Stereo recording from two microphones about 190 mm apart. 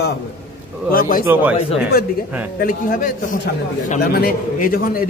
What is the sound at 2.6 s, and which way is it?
A man's voice, 45° left (ahead or behind).